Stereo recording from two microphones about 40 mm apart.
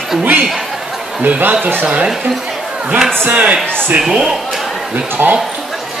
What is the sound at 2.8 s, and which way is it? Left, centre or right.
A man's voice, centre.